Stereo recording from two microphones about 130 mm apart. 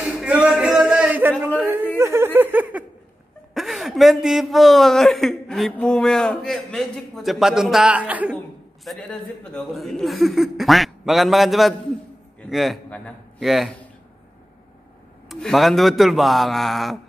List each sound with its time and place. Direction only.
0.0 s a sound: 5° right (ahead or behind)
3.5 s a man's voice: centre (ahead or behind)
8.8 s a man's voice: centre (ahead or behind)
15.2 s a man's voice: centre (ahead or behind)